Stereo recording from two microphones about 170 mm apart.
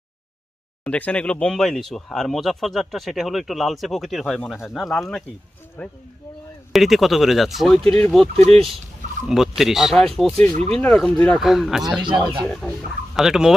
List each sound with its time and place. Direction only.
0.9 s speech: 5° left (ahead or behind)
5.8 s speech: 10° left (ahead or behind)
6.7 s speech: centre (ahead or behind)
10.5 s speech: 35° right (ahead or behind)
10.8 s speech: 5° left (ahead or behind)
12.0 s speech: 30° right (ahead or behind)
13.1 s speech: 5° right (ahead or behind)